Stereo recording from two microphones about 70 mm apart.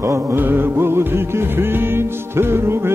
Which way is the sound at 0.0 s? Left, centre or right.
Right.